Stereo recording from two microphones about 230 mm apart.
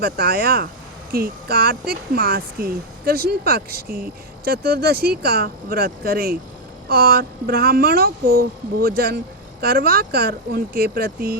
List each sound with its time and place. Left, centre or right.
0.0 s speech: right